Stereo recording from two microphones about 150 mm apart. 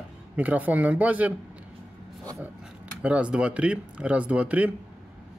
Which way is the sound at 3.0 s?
10° right (ahead or behind).